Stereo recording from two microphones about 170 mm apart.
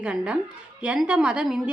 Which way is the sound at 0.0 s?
5° right (ahead or behind).